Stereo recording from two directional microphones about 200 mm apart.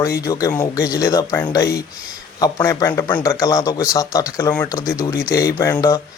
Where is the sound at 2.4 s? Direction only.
15° left (ahead or behind).